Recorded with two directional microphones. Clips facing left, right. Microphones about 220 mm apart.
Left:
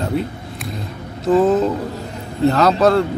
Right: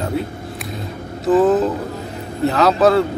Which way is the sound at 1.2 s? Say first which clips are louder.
Even; centre (ahead or behind).